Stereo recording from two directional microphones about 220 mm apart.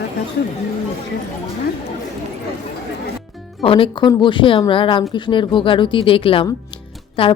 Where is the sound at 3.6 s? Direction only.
25° left (ahead or behind).